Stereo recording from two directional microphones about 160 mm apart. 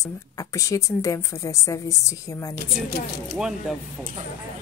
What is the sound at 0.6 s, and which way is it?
Speech, 20° left (ahead or behind).